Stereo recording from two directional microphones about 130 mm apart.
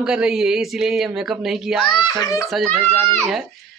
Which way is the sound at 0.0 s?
5° right (ahead or behind).